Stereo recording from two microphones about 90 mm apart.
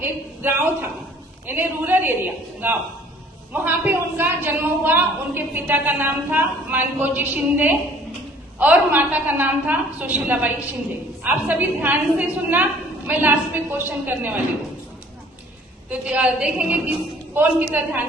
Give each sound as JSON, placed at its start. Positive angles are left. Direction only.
{"t": 0.0, "sound": "a woman's voice", "side_deg": -25}
{"t": 3.5, "sound": "a woman's voice", "side_deg": -20}
{"t": 15.9, "sound": "a woman's voice", "side_deg": -15}